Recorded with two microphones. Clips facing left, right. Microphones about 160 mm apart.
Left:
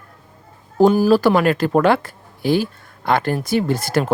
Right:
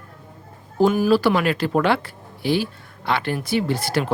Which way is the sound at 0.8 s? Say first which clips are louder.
Left 4 dB; 35° left (ahead or behind).